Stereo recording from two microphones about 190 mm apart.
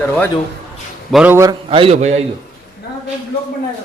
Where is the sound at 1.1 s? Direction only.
10° right (ahead or behind).